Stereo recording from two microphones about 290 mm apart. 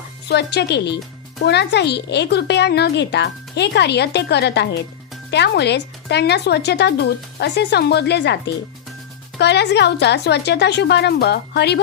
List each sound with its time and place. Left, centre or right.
0.3 s speech: left